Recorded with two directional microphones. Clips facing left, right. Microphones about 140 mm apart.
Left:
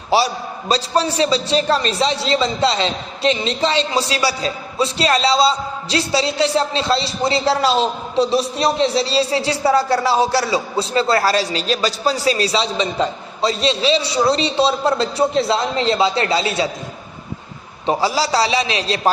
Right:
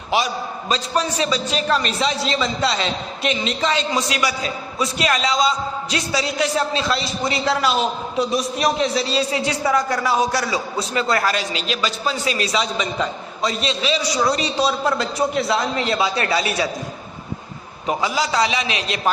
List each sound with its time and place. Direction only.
0.1 s a man's voice: 35° left (ahead or behind)
17.8 s a man's voice: 35° left (ahead or behind)